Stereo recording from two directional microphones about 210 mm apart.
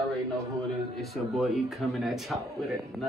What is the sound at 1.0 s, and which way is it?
A man's voice, centre (ahead or behind).